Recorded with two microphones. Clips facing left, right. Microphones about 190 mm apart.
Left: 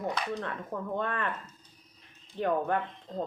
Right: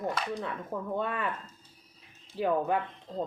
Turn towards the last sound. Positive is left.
turn(degrees=-5)  # may be behind; listen again after turning